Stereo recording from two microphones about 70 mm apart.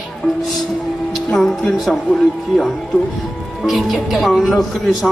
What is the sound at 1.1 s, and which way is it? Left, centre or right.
Speech, centre.